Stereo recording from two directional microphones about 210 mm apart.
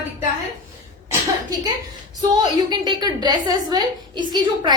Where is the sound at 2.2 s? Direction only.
20° right (ahead or behind).